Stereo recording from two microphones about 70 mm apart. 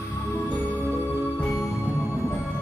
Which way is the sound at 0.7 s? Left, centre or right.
Left.